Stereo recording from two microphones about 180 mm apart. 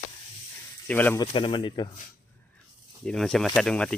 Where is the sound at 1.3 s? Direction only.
30° left (ahead or behind).